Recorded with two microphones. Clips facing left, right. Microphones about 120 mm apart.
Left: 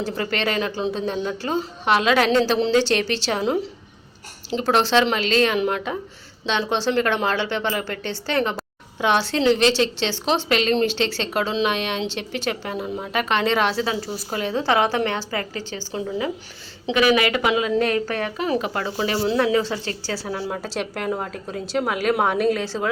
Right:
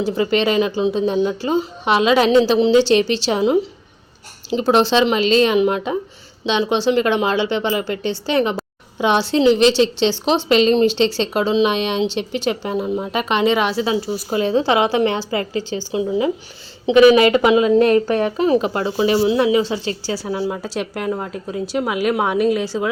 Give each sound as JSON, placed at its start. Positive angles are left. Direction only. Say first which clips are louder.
{"t": 0.0, "sound": "a woman's voice", "louder": "right 7 dB", "side_deg": -15}
{"t": 13.8, "sound": "a woman's voice", "louder": "right 6 dB", "side_deg": -20}
{"t": 16.9, "sound": "a woman's voice", "louder": "right 8 dB", "side_deg": -25}
{"t": 20.1, "sound": "a woman's voice", "louder": "right 5 dB", "side_deg": -5}